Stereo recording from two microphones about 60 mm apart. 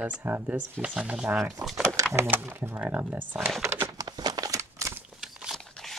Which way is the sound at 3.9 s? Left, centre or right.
Right.